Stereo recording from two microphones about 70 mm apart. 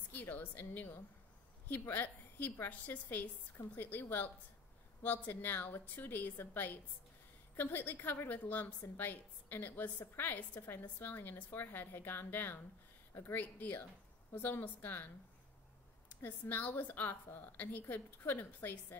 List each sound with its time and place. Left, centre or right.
0.1 s a woman's voice: left
16.1 s a woman's voice: left